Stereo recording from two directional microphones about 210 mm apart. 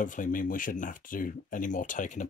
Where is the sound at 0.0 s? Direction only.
40° left (ahead or behind).